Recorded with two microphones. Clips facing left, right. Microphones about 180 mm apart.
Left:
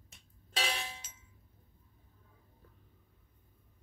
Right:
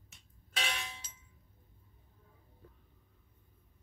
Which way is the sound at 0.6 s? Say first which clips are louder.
Left 3 dB; 35° left (ahead or behind).